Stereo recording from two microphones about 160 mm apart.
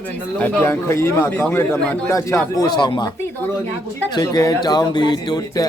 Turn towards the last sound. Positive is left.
turn(degrees=25)  # may be behind; listen again after turning